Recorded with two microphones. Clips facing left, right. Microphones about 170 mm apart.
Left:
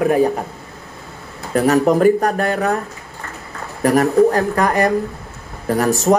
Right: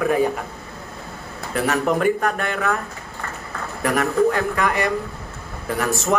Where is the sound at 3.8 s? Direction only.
40° left (ahead or behind).